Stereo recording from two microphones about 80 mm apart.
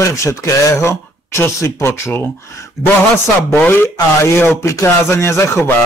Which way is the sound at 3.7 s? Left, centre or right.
Left.